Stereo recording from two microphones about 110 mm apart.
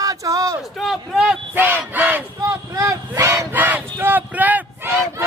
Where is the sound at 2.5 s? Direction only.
30° right (ahead or behind).